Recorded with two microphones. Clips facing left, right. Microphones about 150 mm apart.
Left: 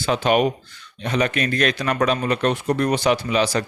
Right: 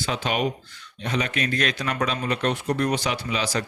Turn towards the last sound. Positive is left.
turn(degrees=60)  # may be behind; listen again after turning